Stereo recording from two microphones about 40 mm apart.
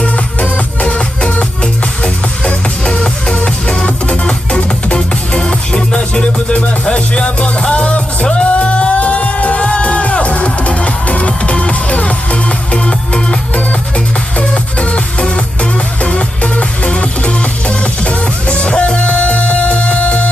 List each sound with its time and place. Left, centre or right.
0.3 s music: left
13.5 s music: left